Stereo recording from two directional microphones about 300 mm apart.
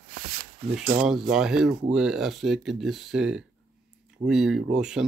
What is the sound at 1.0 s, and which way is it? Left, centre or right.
Speech, centre.